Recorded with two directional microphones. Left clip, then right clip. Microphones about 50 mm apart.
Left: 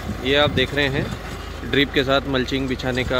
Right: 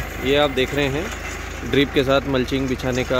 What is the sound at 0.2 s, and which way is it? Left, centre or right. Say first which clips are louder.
Speech: even; right.